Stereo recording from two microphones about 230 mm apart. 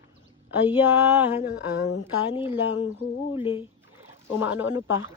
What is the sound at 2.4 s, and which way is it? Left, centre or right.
Speech, centre.